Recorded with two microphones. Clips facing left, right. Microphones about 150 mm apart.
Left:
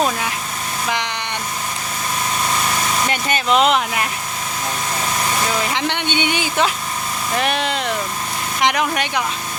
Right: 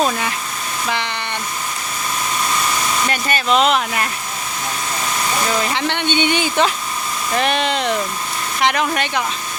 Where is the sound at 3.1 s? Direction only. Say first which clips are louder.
Even; 20° left (ahead or behind).